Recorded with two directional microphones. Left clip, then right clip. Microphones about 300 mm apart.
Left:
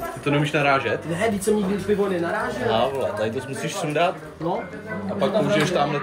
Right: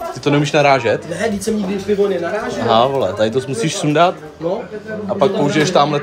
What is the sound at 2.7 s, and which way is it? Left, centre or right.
Speech, right.